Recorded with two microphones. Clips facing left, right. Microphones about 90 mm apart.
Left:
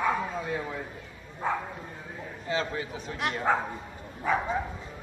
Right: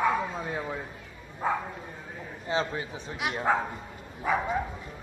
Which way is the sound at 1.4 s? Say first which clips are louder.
Right 1 dB; 5° right (ahead or behind).